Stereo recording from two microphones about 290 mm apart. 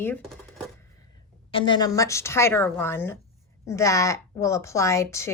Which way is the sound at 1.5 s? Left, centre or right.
Centre.